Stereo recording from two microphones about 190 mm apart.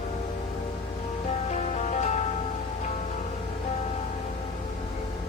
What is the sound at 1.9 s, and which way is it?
Music, 35° left (ahead or behind).